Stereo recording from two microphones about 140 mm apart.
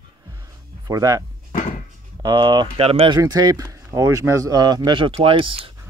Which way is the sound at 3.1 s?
30° right (ahead or behind).